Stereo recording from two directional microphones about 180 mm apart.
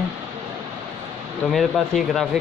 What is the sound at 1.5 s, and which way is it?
Speech, centre (ahead or behind).